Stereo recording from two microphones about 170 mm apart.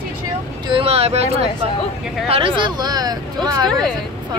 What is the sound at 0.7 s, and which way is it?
Speech, 35° right (ahead or behind).